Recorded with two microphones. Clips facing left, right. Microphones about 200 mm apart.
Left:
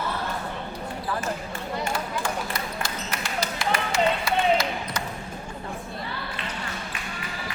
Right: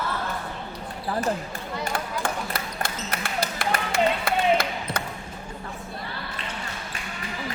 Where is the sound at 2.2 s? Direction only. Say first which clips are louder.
Even; 55° right (ahead or behind).